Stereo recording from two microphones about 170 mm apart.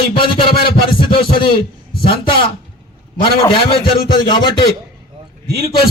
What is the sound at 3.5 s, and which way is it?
Speech, 30° left (ahead or behind).